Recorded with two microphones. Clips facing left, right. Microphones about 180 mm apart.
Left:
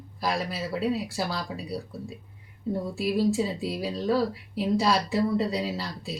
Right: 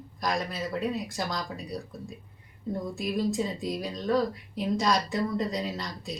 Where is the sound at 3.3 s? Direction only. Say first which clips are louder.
Left 3 dB; 5° left (ahead or behind).